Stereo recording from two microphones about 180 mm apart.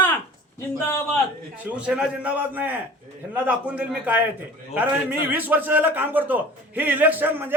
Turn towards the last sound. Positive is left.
turn(degrees=-10)  # may be behind; listen again after turning